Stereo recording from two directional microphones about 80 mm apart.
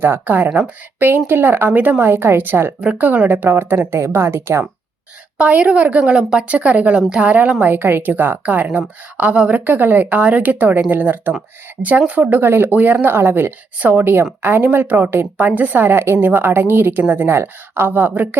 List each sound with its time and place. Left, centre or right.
0.0 s a woman's voice: right
5.4 s a woman's voice: centre
7.7 s a woman's voice: right